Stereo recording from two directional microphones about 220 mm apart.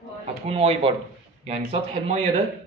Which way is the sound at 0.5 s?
25° right (ahead or behind).